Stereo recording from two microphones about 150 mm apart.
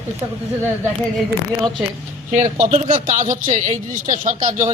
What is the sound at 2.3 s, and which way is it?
A man's voice, 55° right (ahead or behind).